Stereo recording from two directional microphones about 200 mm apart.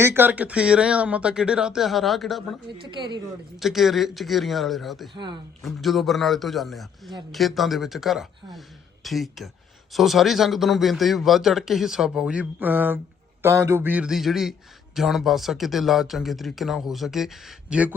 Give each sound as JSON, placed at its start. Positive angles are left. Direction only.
{"t": 0.0, "sound": "speech", "side_deg": -10}
{"t": 2.8, "sound": "speech", "side_deg": -20}
{"t": 3.6, "sound": "speech", "side_deg": 0}
{"t": 5.1, "sound": "speech", "side_deg": -20}
{"t": 5.6, "sound": "speech", "side_deg": 0}